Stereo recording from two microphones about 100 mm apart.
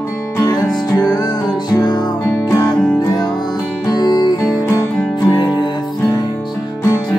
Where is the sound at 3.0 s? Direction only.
40° left (ahead or behind).